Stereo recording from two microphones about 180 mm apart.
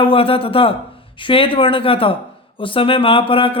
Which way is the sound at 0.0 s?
30° left (ahead or behind).